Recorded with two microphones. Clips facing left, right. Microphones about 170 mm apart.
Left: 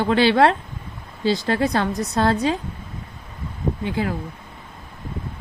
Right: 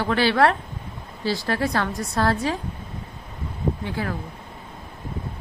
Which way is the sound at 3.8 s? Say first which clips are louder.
Left 4 dB; 20° left (ahead or behind).